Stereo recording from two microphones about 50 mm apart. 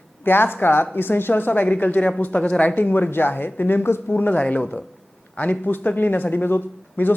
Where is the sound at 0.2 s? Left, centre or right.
Left.